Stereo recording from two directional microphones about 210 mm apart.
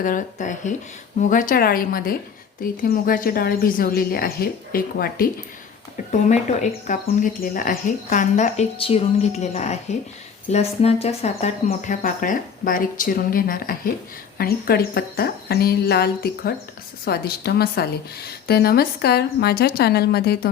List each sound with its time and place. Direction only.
0.0 s speech: 40° left (ahead or behind)
6.1 s speech: 35° left (ahead or behind)